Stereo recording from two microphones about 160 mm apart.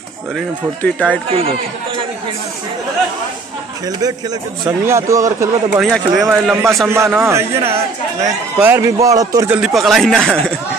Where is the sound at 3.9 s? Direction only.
25° right (ahead or behind).